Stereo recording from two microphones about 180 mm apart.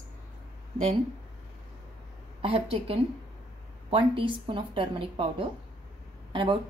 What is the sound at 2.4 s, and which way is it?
A woman's voice, 30° right (ahead or behind).